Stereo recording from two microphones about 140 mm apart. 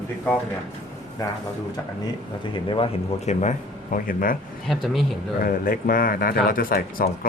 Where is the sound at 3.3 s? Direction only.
55° left (ahead or behind).